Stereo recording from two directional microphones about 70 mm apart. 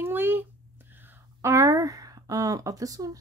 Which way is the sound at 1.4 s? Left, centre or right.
Right.